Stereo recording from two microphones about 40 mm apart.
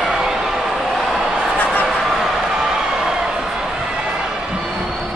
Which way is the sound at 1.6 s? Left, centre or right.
Left.